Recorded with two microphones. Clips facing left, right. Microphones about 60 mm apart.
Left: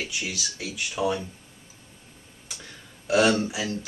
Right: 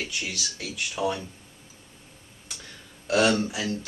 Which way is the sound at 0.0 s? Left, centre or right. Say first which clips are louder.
Left 1 dB; centre.